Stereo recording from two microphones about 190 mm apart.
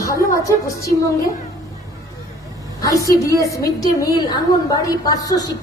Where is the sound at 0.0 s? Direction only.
15° left (ahead or behind).